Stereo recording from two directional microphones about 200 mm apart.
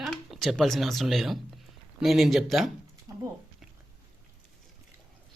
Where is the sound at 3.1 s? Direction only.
15° right (ahead or behind).